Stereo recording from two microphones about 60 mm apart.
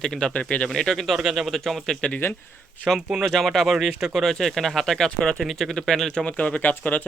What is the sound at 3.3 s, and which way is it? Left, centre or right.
Speech, centre.